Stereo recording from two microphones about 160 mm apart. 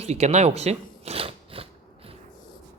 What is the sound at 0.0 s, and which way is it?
Speech, 40° right (ahead or behind).